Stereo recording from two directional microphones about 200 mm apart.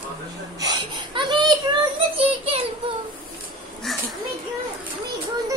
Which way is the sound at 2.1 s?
30° right (ahead or behind).